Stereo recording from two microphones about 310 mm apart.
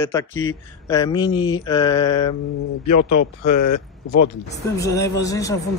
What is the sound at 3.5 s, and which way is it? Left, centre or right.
Speech, left.